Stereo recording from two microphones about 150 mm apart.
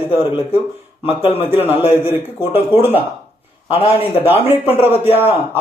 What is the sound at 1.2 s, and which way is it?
Speech, 40° left (ahead or behind).